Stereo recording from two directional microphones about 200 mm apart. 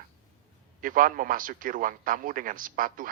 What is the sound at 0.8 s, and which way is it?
Speech, 45° right (ahead or behind).